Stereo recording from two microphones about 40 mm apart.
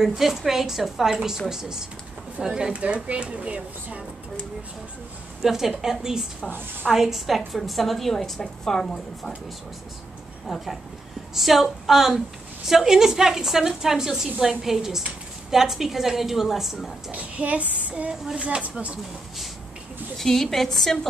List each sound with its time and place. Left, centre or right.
0.0 s a woman's voice: centre; by 4.0 s right
5.4 s a woman's voice: centre
10.5 s a woman's voice: centre
17.1 s speech: right
20.2 s a woman's voice: centre